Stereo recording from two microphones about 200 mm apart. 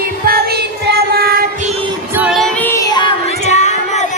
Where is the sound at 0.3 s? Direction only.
50° right (ahead or behind).